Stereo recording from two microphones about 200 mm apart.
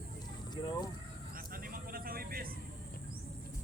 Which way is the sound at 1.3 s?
45° right (ahead or behind).